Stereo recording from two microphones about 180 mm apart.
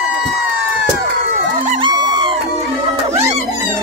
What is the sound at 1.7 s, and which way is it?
Music, 25° right (ahead or behind).